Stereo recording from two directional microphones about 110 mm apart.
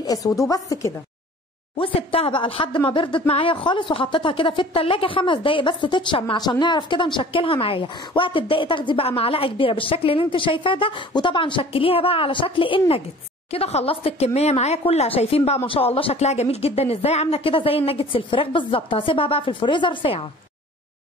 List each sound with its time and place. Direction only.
0.0 s a woman's voice: 35° left (ahead or behind)
1.8 s a woman's voice: 60° left (ahead or behind)
13.5 s speech: 70° left (ahead or behind); by 20.2 s 50° left (ahead or behind)